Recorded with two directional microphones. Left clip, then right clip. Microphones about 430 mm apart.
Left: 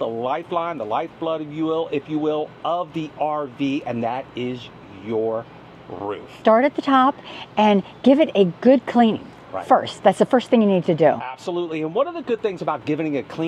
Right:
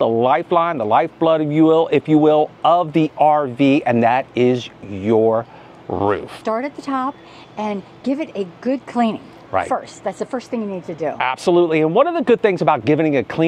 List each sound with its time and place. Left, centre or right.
0.0 s a man's voice: right
6.4 s a woman's voice: left
9.7 s a woman's voice: left
11.1 s a man's voice: right